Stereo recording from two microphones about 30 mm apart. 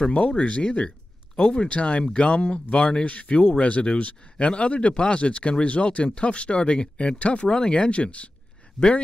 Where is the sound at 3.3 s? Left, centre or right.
Left.